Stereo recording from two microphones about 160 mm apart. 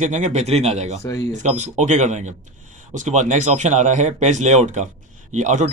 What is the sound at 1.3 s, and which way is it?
Speech, 50° right (ahead or behind).